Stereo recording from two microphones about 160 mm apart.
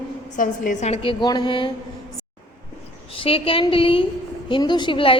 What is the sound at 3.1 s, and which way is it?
A woman's voice, 35° left (ahead or behind).